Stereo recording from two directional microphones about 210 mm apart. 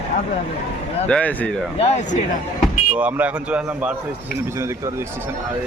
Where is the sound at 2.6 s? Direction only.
5° right (ahead or behind).